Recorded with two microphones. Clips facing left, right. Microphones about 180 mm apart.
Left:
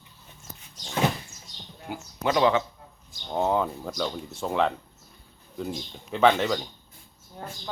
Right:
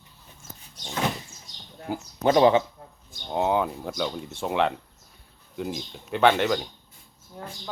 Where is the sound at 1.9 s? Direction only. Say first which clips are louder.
Right 5 dB; 35° right (ahead or behind).